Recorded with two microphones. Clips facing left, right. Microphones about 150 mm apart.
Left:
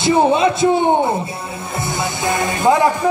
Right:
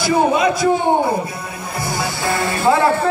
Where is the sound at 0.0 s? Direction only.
25° left (ahead or behind).